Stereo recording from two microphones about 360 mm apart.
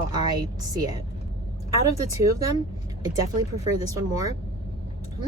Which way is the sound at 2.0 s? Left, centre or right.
Centre.